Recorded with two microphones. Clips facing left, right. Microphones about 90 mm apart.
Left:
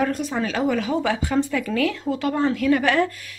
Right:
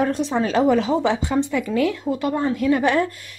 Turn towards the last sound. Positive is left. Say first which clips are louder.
# right 1 dB
turn(degrees=-20)  # may be behind; listen again after turning